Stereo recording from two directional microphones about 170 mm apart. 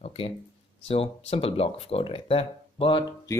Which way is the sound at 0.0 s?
35° left (ahead or behind).